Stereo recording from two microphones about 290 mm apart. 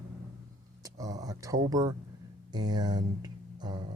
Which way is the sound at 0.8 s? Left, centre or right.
Centre.